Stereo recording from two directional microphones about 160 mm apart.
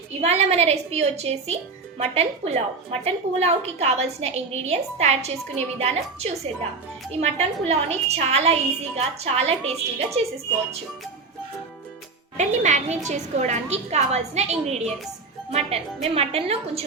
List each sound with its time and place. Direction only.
0.1 s a woman's voice: 40° right (ahead or behind)
12.4 s a woman's voice: 50° right (ahead or behind)